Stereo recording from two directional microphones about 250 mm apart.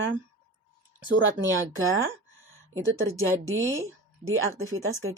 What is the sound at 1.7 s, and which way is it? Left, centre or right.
A woman's voice, right.